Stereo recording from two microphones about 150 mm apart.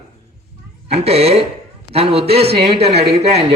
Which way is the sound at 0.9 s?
40° right (ahead or behind).